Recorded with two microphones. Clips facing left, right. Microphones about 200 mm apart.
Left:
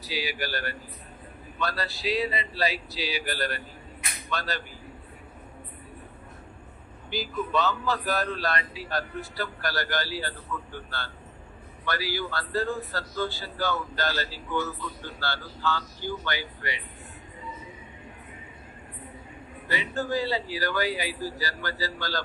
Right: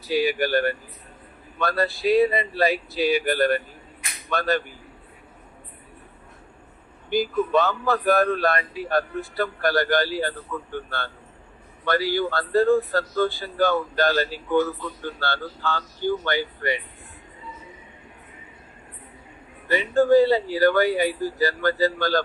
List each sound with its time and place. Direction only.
0.1 s a man's voice: 50° right (ahead or behind)
7.1 s a man's voice: 50° right (ahead or behind)
19.7 s a man's voice: 55° right (ahead or behind)